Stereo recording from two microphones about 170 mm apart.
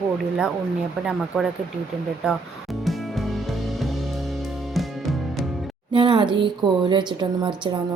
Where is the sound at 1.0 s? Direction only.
5° right (ahead or behind).